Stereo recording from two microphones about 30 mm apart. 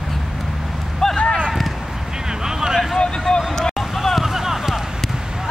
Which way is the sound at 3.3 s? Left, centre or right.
Left.